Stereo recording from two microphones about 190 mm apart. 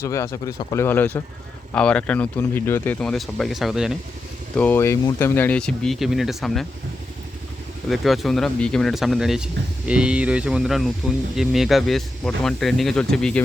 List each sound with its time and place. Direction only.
0.0 s speech: 15° left (ahead or behind); by 3.9 s centre (ahead or behind)
4.5 s speech: 10° left (ahead or behind)
7.9 s speech: centre (ahead or behind)